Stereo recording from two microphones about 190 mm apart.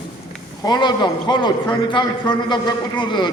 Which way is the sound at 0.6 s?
25° left (ahead or behind).